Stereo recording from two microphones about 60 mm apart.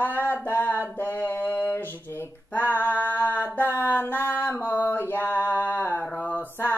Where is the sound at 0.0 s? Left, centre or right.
Left.